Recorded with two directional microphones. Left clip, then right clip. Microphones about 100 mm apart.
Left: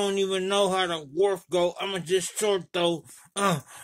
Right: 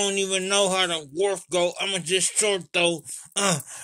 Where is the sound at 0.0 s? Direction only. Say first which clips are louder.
Right 1 dB; 40° left (ahead or behind).